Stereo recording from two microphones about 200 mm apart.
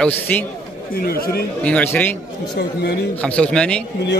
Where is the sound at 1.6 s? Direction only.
10° left (ahead or behind).